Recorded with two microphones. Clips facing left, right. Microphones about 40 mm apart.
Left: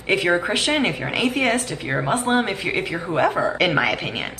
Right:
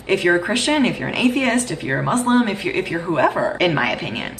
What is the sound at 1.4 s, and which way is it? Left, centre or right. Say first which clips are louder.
A woman's voice: right 2 dB; centre.